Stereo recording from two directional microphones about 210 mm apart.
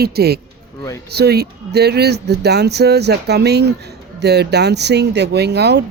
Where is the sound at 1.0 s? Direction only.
50° right (ahead or behind).